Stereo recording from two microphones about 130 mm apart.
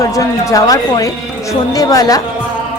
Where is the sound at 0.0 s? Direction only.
25° left (ahead or behind).